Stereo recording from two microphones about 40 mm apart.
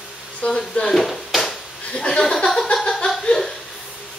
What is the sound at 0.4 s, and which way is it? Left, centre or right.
Speech, left.